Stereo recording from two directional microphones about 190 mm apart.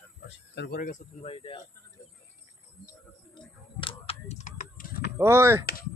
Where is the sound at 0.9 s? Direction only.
30° left (ahead or behind).